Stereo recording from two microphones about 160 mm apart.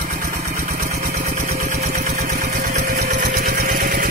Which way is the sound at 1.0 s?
65° right (ahead or behind).